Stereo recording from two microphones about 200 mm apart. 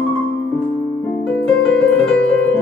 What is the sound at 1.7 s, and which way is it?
Music, 5° left (ahead or behind).